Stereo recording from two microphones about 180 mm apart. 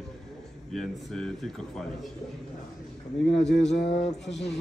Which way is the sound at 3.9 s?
35° left (ahead or behind).